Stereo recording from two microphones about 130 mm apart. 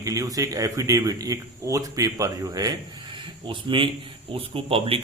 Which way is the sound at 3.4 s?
40° right (ahead or behind).